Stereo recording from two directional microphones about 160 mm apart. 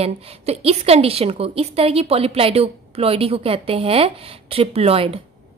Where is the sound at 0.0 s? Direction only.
40° right (ahead or behind).